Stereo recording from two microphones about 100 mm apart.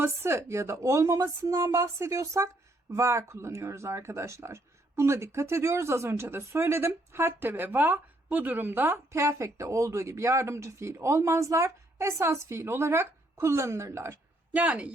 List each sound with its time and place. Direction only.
0.0 s speech: 25° right (ahead or behind)
14.5 s speech: 15° right (ahead or behind)